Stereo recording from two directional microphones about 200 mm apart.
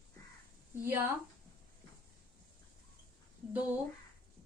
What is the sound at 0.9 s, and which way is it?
Speech, 10° right (ahead or behind).